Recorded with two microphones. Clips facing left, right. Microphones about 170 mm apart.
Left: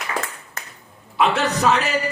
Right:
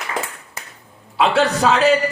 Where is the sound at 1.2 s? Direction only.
30° right (ahead or behind).